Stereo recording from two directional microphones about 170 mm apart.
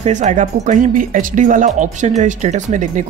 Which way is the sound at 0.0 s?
45° right (ahead or behind).